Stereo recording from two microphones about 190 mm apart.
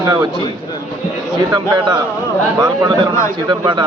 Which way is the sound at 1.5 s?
20° right (ahead or behind).